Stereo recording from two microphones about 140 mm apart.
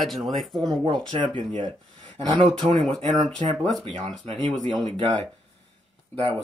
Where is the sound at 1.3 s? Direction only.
35° right (ahead or behind).